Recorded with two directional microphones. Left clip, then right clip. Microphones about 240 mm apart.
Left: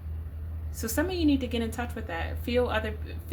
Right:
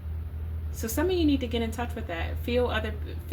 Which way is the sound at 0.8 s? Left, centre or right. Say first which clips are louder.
Right 2 dB; left.